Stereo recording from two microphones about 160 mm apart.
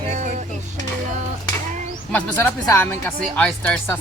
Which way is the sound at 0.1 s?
50° right (ahead or behind).